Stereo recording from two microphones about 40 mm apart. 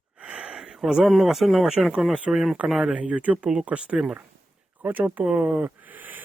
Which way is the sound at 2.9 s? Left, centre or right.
Right.